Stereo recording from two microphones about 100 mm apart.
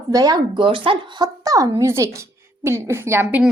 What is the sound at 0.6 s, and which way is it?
Speech, 60° right (ahead or behind).